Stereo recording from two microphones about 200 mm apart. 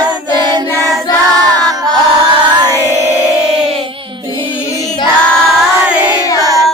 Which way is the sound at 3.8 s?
25° right (ahead or behind).